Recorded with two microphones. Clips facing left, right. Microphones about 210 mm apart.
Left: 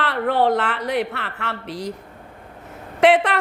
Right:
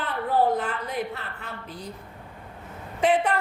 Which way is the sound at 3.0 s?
80° left.